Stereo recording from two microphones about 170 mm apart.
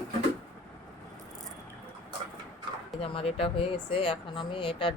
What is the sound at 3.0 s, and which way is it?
Speech, 35° left (ahead or behind).